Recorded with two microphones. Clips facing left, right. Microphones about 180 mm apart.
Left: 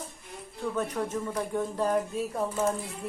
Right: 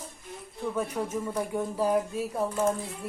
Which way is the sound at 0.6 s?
10° right (ahead or behind).